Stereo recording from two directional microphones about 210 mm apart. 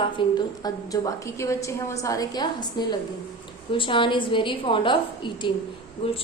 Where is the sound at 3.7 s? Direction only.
25° left (ahead or behind).